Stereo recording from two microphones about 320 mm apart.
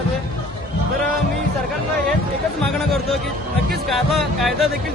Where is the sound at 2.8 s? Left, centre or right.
Centre.